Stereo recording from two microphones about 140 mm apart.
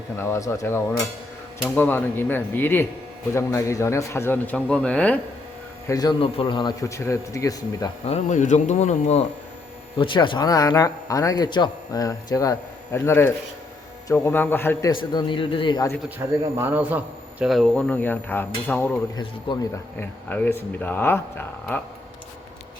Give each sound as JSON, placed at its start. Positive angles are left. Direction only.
{"t": 0.2, "sound": "speech", "side_deg": 20}
{"t": 5.9, "sound": "speech", "side_deg": 30}
{"t": 6.1, "sound": "speech", "side_deg": 40}
{"t": 8.0, "sound": "speech", "side_deg": 55}
{"t": 10.0, "sound": "speech", "side_deg": 35}
{"t": 14.8, "sound": "a man's voice", "side_deg": 35}
{"t": 16.0, "sound": "a man's voice", "side_deg": -15}
{"t": 17.4, "sound": "speech", "side_deg": 0}
{"t": 19.1, "sound": "a man's voice", "side_deg": 35}
{"t": 20.0, "sound": "speech", "side_deg": 15}